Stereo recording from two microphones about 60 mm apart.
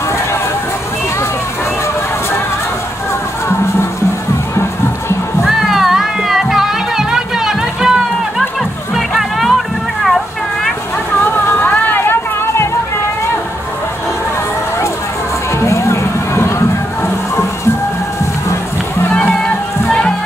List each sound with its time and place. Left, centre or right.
5.4 s music: centre
8.9 s music: centre
10.0 s a sound: centre
11.3 s music: left
15.6 s music: left
19.1 s music: centre